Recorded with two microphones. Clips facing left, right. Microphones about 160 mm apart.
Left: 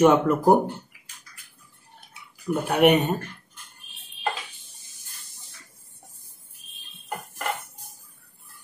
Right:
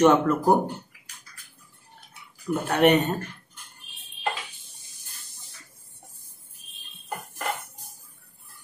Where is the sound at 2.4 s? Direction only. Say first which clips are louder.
Left 1 dB; 10° left (ahead or behind).